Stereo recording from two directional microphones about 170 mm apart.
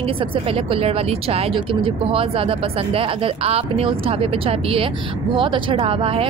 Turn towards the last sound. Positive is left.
turn(degrees=-30)  # may be behind; listen again after turning